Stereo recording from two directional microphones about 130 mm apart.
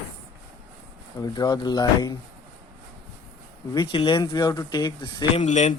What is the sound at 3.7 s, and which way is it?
Speech, 35° left (ahead or behind).